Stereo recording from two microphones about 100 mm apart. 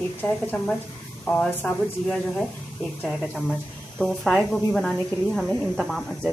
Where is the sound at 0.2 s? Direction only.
20° left (ahead or behind).